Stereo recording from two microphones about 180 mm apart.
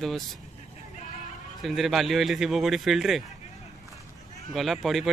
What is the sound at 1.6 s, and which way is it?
A man's voice, centre (ahead or behind).